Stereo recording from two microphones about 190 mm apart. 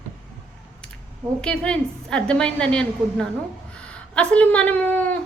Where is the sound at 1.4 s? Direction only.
5° left (ahead or behind).